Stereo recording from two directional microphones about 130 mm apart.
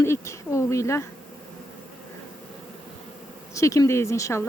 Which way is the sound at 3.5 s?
25° left (ahead or behind).